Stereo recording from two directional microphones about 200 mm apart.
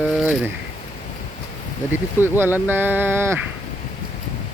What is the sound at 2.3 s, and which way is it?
Speech, 10° right (ahead or behind).